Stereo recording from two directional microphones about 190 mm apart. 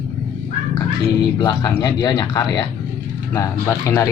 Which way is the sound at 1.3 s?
20° left (ahead or behind).